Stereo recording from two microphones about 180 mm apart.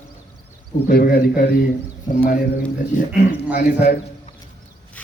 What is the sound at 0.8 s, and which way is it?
Speech, 55° left (ahead or behind).